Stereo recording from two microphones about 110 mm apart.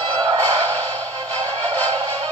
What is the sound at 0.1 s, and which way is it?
Music, 40° right (ahead or behind).